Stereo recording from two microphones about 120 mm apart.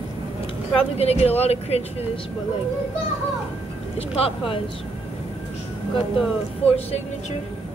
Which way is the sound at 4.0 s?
55° left (ahead or behind).